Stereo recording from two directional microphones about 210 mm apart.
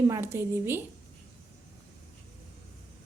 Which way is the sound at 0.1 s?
10° right (ahead or behind).